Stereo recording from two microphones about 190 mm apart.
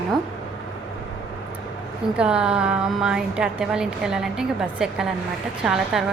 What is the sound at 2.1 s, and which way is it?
Speech, 5° right (ahead or behind).